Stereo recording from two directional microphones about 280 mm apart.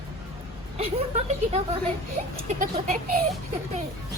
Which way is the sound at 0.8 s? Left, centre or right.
Right.